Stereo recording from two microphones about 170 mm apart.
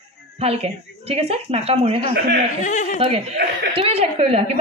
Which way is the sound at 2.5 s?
45° left (ahead or behind).